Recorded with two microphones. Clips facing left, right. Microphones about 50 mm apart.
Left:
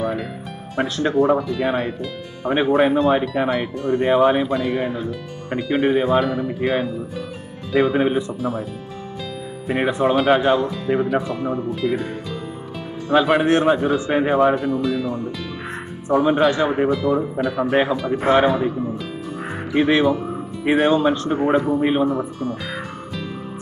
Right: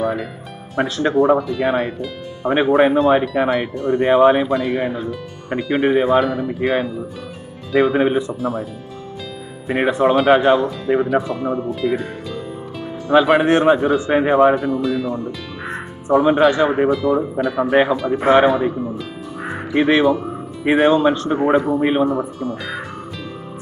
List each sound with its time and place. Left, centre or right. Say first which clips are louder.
0.0 s music: right 3 dB; centre
0.7 s speech: right 2 dB; centre
2.5 s speech: right 3 dB; centre
6.1 s speech: right 2 dB; centre
9.7 s speech: right 3 dB; centre
10.7 s speech: right 3 dB; centre
11.7 s music: right 1 dB; centre
13.1 s speech: right 3 dB; centre
15.3 s music: right 1 dB; centre
16.2 s speech: right 3 dB; centre
19.4 s music: right 2 dB; centre
19.9 s speech: right 4 dB; centre